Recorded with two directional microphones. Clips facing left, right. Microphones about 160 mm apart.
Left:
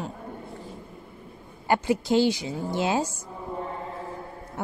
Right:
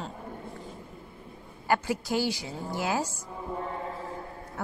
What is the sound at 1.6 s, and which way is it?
Speech, 25° left (ahead or behind).